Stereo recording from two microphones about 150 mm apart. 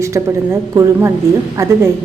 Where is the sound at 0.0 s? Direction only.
20° right (ahead or behind).